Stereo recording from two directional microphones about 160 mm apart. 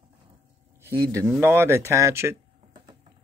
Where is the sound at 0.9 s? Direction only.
25° right (ahead or behind).